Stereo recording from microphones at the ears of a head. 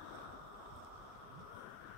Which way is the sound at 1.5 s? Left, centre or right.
Left.